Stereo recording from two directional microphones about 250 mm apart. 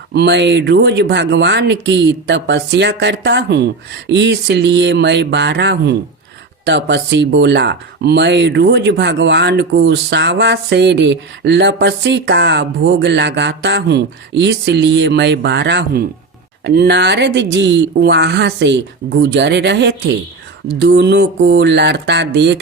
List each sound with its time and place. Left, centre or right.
0.1 s speech: right